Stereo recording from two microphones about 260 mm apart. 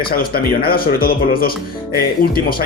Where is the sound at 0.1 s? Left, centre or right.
Left.